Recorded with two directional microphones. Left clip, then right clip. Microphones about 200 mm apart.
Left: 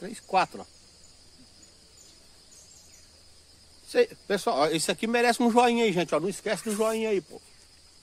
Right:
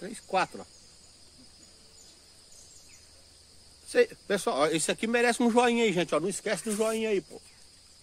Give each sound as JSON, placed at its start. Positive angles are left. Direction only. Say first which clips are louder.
{"t": 0.0, "sound": "speech", "louder": "left 3 dB", "side_deg": 25}
{"t": 3.8, "sound": "speech", "louder": "left 1 dB", "side_deg": 20}